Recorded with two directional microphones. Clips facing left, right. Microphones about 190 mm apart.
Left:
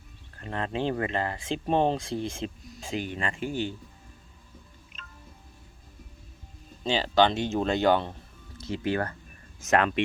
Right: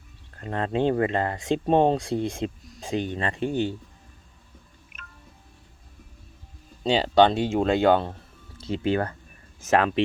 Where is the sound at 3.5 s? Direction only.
20° right (ahead or behind).